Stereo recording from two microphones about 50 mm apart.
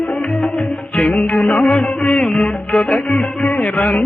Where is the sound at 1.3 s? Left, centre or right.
Left.